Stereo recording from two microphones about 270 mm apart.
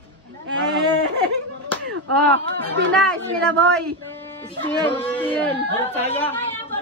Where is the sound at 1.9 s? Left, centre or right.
Right.